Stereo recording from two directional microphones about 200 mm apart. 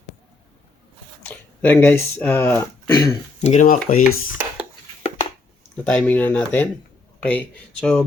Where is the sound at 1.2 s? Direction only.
10° left (ahead or behind).